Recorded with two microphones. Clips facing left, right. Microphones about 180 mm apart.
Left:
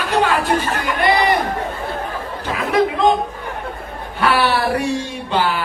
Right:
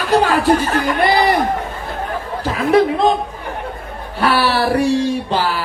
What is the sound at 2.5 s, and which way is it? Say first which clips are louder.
Speech: right 4 dB; 35° right (ahead or behind).